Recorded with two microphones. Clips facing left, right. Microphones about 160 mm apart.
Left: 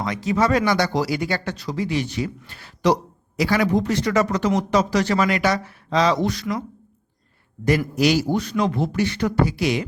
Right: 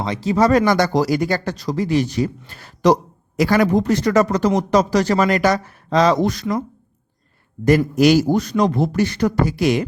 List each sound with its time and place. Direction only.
0.0 s a man's voice: 30° right (ahead or behind); by 6.4 s 45° right (ahead or behind)
7.9 s a man's voice: 45° right (ahead or behind)